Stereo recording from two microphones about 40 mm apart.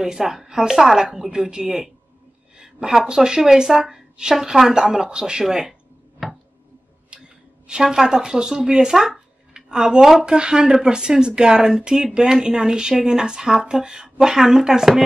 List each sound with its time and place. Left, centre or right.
0.0 s a woman's voice: centre
1.4 s a woman's voice: right
5.7 s a sound: centre
7.6 s a woman's voice: centre